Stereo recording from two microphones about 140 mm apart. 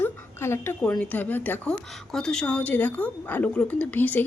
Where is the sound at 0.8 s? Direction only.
10° left (ahead or behind).